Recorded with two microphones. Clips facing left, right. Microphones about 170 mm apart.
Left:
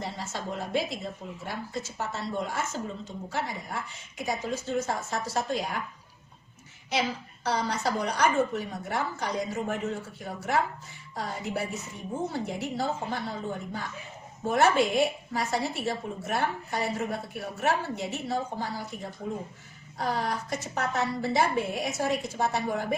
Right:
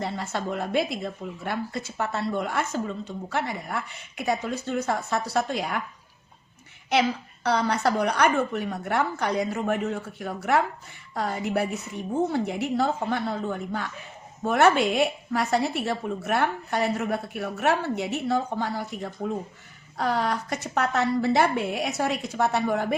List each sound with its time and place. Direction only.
0.0 s speech: 60° right (ahead or behind)
6.9 s a woman's voice: 65° right (ahead or behind)